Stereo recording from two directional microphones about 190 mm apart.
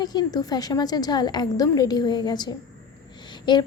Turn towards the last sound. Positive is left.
turn(degrees=25)  # may be behind; listen again after turning